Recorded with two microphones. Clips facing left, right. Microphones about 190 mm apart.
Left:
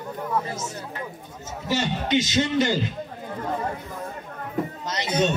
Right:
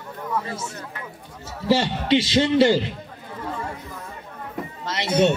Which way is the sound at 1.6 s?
30° right (ahead or behind).